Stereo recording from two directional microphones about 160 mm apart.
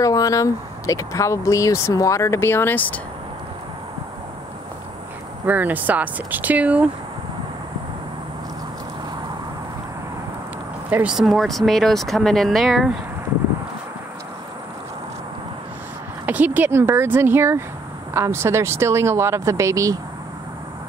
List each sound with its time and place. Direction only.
0.0 s speech: 20° left (ahead or behind)
5.5 s speech: 10° right (ahead or behind)
10.9 s speech: 10° right (ahead or behind)
16.3 s speech: 10° right (ahead or behind)